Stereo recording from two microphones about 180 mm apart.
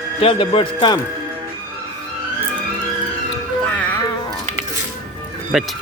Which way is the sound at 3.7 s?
5° left (ahead or behind).